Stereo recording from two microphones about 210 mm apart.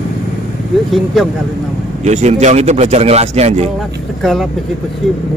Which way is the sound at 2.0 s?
35° right (ahead or behind).